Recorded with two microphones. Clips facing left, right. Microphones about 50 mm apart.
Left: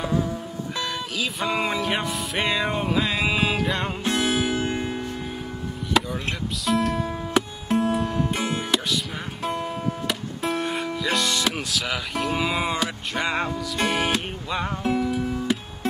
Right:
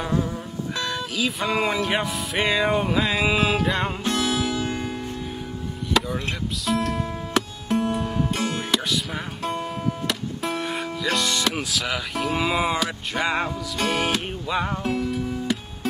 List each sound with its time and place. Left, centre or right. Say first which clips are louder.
0.0 s music: even; centre
4.0 s music: left 1 dB; left
5.9 s music: left 1 dB; centre
6.6 s speech: left 2 dB; centre
7.0 s music: left 1 dB; centre
7.8 s music: left 1 dB; centre
8.3 s music: even; centre
8.7 s music: right 1 dB; centre
10.5 s music: left 3 dB; centre
11.0 s speech: right 1 dB; centre
15.0 s music: left 1 dB; centre